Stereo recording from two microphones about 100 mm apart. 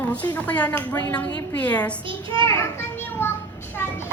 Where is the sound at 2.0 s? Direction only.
60° right (ahead or behind).